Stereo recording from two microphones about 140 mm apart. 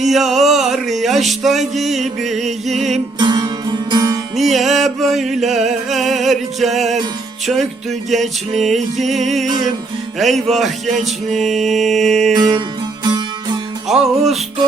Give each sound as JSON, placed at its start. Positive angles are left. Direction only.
{"t": 0.1, "sound": "music", "side_deg": 0}
{"t": 3.2, "sound": "music", "side_deg": -30}
{"t": 4.4, "sound": "music", "side_deg": 0}
{"t": 12.3, "sound": "music", "side_deg": -30}
{"t": 13.8, "sound": "music", "side_deg": 0}